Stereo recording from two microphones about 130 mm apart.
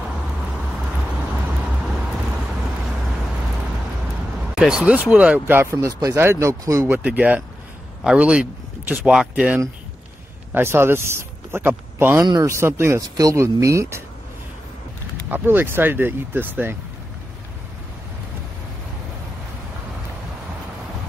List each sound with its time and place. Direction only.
4.6 s speech: 5° right (ahead or behind); by 14.0 s 20° right (ahead or behind)
15.2 s speech: 15° right (ahead or behind)